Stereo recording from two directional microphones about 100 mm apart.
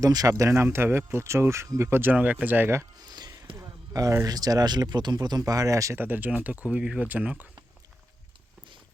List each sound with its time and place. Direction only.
0.0 s speech: 40° right (ahead or behind); by 2.8 s 20° right (ahead or behind)
3.0 s music: 45° right (ahead or behind)
3.5 s speech: 35° right (ahead or behind)
6.0 s speech: 20° right (ahead or behind)